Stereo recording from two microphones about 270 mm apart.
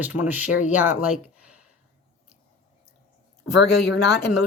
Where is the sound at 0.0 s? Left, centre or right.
Centre.